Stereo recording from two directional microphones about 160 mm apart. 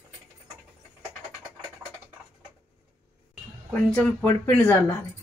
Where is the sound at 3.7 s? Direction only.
10° left (ahead or behind).